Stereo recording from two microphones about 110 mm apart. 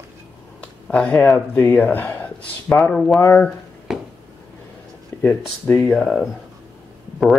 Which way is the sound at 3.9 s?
5° right (ahead or behind).